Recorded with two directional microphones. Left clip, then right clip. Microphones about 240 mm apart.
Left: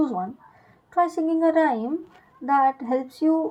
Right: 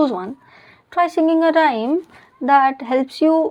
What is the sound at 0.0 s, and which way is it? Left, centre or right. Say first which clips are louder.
A woman's voice: right 6 dB; right.